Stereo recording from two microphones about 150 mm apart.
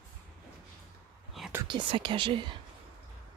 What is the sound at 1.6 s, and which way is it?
Speech, 30° right (ahead or behind).